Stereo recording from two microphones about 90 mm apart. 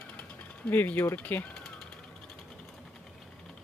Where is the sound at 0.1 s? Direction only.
15° left (ahead or behind).